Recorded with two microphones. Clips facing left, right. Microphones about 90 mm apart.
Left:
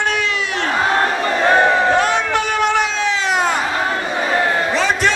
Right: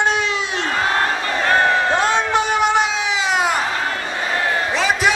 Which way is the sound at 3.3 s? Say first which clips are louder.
Even; 5° right (ahead or behind).